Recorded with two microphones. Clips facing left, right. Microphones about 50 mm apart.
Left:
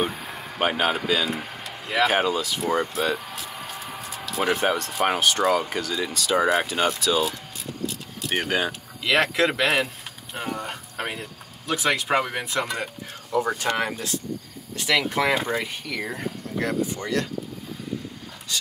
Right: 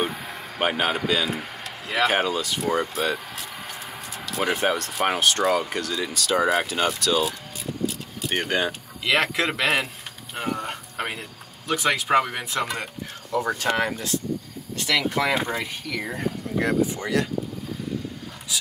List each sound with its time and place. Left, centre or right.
0.0 s speech: centre
16.5 s speech: centre
18.5 s a sound: centre